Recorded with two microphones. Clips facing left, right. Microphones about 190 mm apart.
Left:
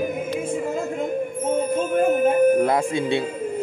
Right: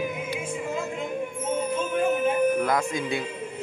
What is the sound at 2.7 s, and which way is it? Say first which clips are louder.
Speech: left 5 dB; 30° left (ahead or behind).